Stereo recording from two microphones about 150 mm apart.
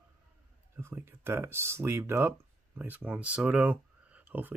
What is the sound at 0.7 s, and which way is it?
Speech, 15° right (ahead or behind).